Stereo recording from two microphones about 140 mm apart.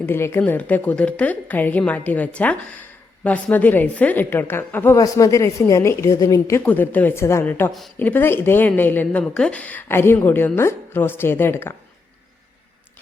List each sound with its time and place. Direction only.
0.0 s speech: 20° left (ahead or behind)
4.9 s a woman's voice: 25° left (ahead or behind)
6.7 s speech: 10° left (ahead or behind)